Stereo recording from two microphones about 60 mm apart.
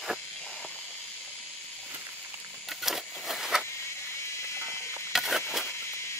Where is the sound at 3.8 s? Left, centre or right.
Left.